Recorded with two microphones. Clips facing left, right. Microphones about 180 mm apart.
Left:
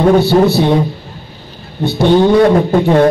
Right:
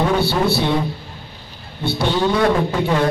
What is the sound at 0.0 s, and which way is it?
Speech, 50° left (ahead or behind).